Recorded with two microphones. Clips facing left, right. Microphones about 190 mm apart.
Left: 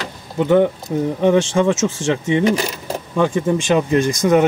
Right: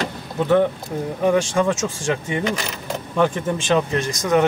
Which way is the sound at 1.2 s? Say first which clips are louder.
Left 3 dB; 25° left (ahead or behind).